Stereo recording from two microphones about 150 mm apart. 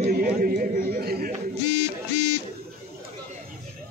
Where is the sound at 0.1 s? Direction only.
80° right.